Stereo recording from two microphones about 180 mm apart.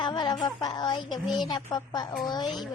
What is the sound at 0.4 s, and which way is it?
Speech, 20° left (ahead or behind).